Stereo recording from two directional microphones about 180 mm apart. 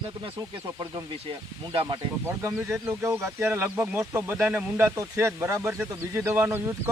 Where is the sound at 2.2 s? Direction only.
15° right (ahead or behind).